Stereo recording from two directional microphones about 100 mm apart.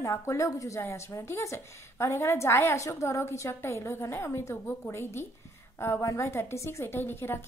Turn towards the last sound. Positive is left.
turn(degrees=25)  # may be behind; listen again after turning